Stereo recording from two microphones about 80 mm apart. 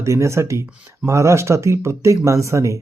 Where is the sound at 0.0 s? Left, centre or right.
Right.